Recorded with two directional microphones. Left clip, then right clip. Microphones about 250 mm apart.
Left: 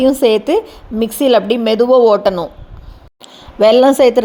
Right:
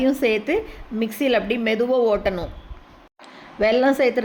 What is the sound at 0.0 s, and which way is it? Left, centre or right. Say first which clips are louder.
A woman's voice: left 9 dB; left.